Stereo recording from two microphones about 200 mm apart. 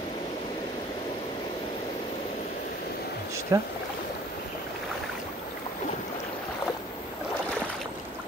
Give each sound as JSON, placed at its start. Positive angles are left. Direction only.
{"t": 3.5, "sound": "speech", "side_deg": -15}